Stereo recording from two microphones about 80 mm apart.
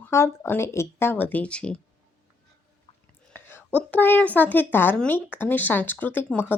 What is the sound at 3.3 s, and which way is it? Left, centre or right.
A woman's voice, left.